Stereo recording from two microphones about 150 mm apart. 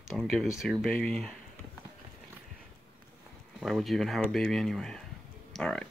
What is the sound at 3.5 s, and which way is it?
Speech, centre (ahead or behind).